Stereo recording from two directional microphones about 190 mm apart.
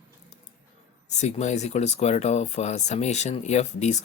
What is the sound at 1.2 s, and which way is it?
Speech, 35° left (ahead or behind).